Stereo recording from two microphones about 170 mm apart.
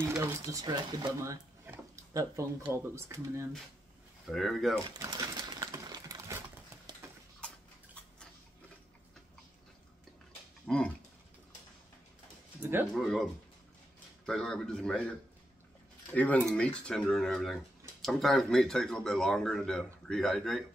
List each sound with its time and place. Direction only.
0.1 s speech: 15° right (ahead or behind)
4.3 s speech: centre (ahead or behind)
4.9 s typewriter: 20° right (ahead or behind)
7.0 s a sound: 15° right (ahead or behind)
7.3 s tick-tock: 5° left (ahead or behind)
10.7 s speech: centre (ahead or behind)
12.9 s speech: centre (ahead or behind)
16.1 s speech: 10° left (ahead or behind)